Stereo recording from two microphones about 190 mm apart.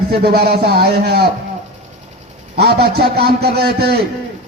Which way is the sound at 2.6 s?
60° right (ahead or behind).